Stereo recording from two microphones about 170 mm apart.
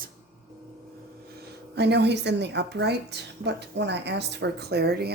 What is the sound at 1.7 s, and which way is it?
A woman's voice, 80° right.